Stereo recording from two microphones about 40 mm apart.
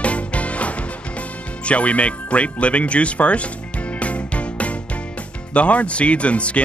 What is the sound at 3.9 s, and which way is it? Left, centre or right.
Music, left.